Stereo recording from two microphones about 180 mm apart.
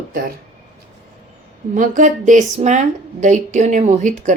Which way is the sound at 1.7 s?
45° right (ahead or behind).